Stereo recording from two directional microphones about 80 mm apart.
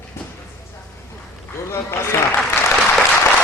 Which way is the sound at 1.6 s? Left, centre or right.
Left.